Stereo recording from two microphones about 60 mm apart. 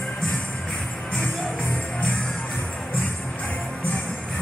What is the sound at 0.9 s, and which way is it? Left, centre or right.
Music, centre.